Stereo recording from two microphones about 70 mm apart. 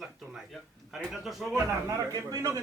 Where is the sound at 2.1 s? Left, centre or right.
Right.